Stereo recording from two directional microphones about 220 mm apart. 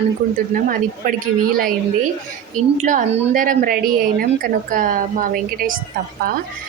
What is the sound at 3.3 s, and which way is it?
Speech, 40° right (ahead or behind).